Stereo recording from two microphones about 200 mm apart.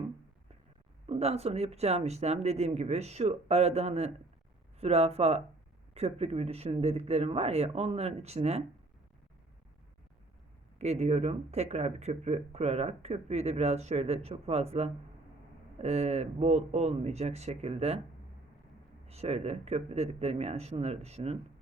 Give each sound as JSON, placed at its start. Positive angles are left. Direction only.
{"t": 1.0, "sound": "speech", "side_deg": -30}
{"t": 10.8, "sound": "speech", "side_deg": -35}
{"t": 19.0, "sound": "speech", "side_deg": -30}